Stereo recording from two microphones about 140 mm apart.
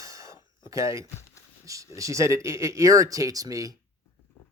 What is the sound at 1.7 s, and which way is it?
Speech, 25° right (ahead or behind).